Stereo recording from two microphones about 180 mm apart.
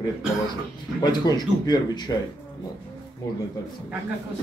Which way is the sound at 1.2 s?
20° left (ahead or behind).